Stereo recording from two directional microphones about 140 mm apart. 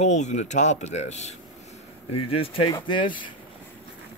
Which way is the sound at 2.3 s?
40° left (ahead or behind).